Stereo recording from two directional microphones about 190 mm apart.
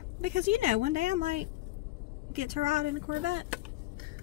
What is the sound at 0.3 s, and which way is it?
Speech, 45° right (ahead or behind).